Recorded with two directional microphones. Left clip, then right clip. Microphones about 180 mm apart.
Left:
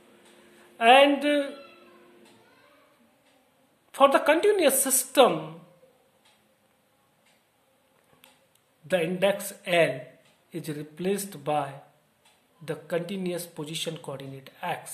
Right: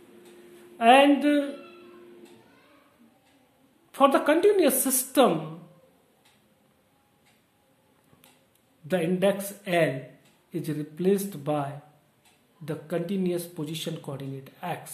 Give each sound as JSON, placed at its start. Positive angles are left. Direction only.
{"t": 0.7, "sound": "speech", "side_deg": 15}
{"t": 3.9, "sound": "speech", "side_deg": 20}
{"t": 8.8, "sound": "speech", "side_deg": 20}